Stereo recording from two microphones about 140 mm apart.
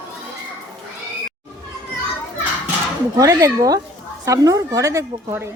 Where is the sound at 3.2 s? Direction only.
25° right (ahead or behind).